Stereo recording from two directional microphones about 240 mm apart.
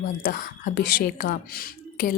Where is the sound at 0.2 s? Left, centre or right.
Left.